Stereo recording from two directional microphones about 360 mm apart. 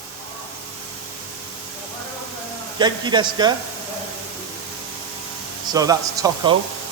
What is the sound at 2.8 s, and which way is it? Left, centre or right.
Speech, centre.